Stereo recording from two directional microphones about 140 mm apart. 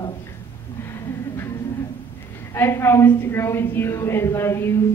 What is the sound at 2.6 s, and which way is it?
A woman's voice, 20° left (ahead or behind).